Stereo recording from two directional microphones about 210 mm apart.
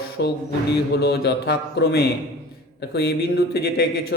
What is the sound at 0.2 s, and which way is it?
Speech, 55° left (ahead or behind).